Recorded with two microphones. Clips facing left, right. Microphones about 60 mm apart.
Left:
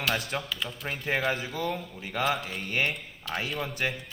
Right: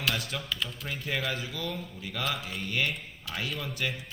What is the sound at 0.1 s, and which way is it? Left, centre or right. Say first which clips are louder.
Speech: left 4 dB; left.